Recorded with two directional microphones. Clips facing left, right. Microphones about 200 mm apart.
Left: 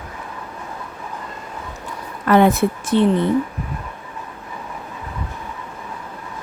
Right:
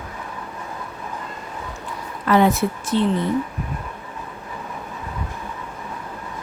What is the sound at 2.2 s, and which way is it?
Speech, 55° left (ahead or behind).